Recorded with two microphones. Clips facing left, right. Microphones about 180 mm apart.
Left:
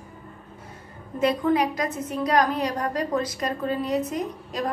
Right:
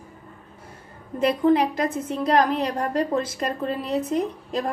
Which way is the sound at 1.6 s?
30° right (ahead or behind).